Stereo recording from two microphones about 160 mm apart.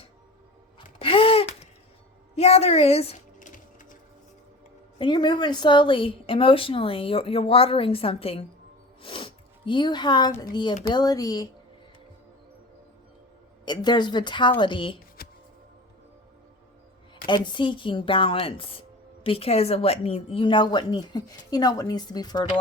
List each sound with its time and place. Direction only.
0.9 s a sound: 35° left (ahead or behind)
2.3 s speech: 40° left (ahead or behind)
3.3 s music: 50° left (ahead or behind)
4.9 s speech: 30° left (ahead or behind)
9.0 s snort: 35° left (ahead or behind)
10.3 s a woman's voice: 25° left (ahead or behind)
13.7 s a woman's voice: 25° left (ahead or behind)
15.2 s music: 70° left (ahead or behind)
17.2 s speech: 30° left (ahead or behind)